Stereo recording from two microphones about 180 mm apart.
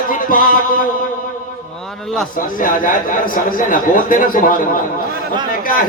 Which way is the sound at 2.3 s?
50° left (ahead or behind).